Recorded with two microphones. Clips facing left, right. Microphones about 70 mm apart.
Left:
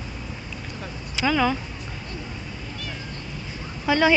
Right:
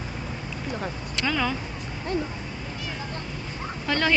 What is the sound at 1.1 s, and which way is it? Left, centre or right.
Speech, centre.